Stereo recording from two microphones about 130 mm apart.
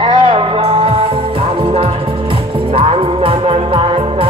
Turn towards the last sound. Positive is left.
turn(degrees=-45)  # may be behind; listen again after turning